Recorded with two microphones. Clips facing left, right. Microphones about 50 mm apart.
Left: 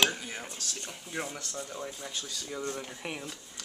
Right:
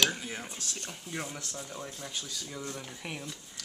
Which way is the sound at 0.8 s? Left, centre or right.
Centre.